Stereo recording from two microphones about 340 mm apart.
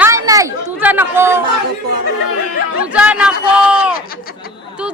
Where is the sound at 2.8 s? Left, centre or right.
Centre.